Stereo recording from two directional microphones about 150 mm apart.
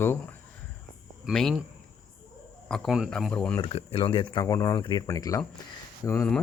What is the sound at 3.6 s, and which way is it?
Speech, 35° left (ahead or behind).